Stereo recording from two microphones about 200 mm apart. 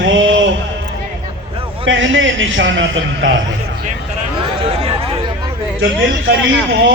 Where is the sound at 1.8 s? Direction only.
70° right (ahead or behind).